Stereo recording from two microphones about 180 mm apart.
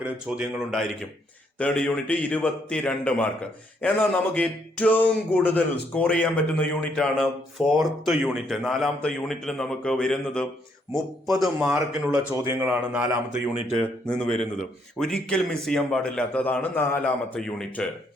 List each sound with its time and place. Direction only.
0.0 s a man's voice: 5° right (ahead or behind)
11.6 s speech: 5° right (ahead or behind)
14.9 s a man's voice: 5° left (ahead or behind)